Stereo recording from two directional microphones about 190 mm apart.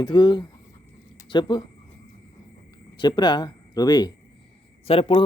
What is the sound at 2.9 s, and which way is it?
A man's voice, 25° left (ahead or behind).